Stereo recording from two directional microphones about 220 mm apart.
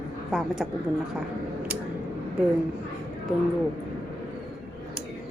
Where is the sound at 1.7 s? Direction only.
5° right (ahead or behind).